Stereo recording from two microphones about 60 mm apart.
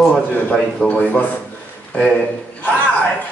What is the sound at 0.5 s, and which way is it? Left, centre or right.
Speech, centre.